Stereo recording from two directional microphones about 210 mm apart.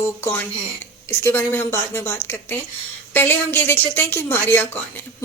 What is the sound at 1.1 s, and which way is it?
Speech, 10° left (ahead or behind).